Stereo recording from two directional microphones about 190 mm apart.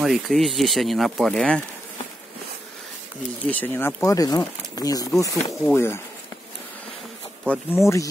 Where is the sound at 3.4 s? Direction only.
10° left (ahead or behind).